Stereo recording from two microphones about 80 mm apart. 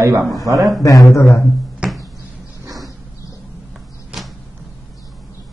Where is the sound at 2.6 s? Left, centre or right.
Right.